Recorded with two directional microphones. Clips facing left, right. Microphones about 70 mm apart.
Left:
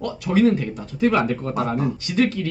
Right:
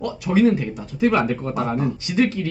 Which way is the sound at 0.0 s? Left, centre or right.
Centre.